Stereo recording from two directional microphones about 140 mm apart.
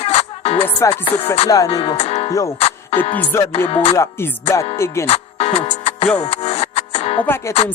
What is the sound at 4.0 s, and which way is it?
Music, 20° left (ahead or behind).